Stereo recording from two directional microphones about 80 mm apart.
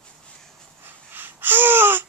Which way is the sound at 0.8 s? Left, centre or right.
Right.